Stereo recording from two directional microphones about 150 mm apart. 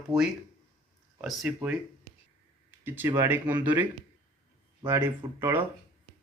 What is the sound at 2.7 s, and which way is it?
Speech, 15° right (ahead or behind).